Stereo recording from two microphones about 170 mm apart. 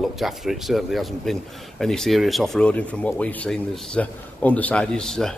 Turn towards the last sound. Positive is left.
turn(degrees=0)  # may be behind; listen again after turning